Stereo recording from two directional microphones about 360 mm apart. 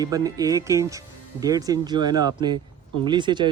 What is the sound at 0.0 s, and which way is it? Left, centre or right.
Speech, centre.